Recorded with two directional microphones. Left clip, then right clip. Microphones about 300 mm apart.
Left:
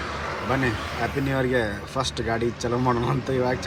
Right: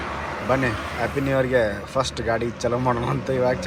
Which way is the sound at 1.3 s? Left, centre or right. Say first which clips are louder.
Right 6 dB; centre.